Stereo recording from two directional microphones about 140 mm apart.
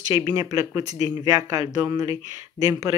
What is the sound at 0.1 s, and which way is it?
Speech, 25° right (ahead or behind).